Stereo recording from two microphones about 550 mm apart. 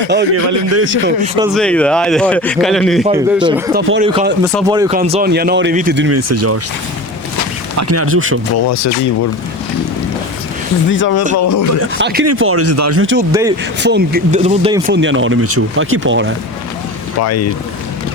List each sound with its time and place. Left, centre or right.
0.1 s speech: centre
1.0 s speech: centre
1.5 s a man's voice: centre
3.8 s speech: centre
7.8 s speech: right
8.5 s speech: left
10.9 s speech: left
11.3 s speech: left
11.9 s speech: centre
17.2 s speech: left